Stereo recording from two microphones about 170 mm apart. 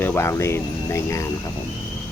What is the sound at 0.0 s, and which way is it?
Speech, 15° left (ahead or behind).